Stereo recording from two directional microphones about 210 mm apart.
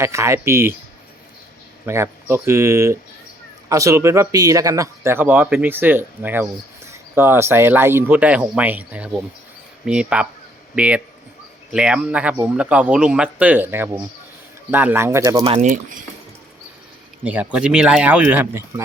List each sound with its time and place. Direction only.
0.0 s speech: 15° right (ahead or behind)
1.9 s speech: 10° right (ahead or behind)
15.4 s speech: 35° right (ahead or behind)
17.2 s speech: 5° right (ahead or behind)